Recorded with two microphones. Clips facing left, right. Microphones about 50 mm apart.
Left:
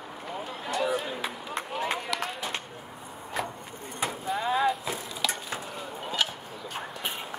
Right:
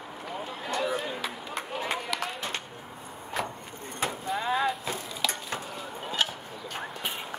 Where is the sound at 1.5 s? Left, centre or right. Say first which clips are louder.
Left 2 dB; centre.